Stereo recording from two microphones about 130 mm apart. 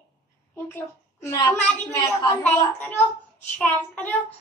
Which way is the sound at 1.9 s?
20° left (ahead or behind).